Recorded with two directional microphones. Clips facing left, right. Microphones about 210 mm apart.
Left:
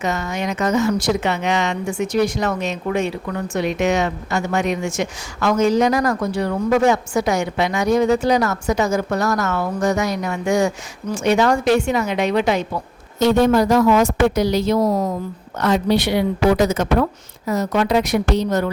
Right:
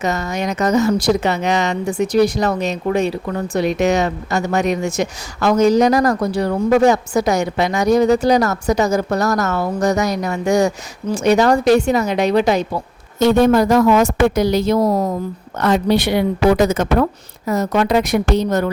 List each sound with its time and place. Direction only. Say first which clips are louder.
0.0 s speech: right 2 dB; 40° right (ahead or behind)
13.1 s speech: right 2 dB; 50° right (ahead or behind)